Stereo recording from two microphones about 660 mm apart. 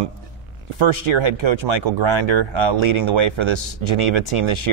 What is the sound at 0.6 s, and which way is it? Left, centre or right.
Speech, right.